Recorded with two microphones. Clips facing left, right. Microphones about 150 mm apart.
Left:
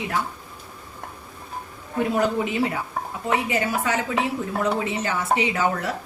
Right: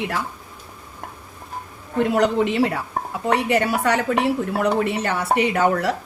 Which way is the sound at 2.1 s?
80° right.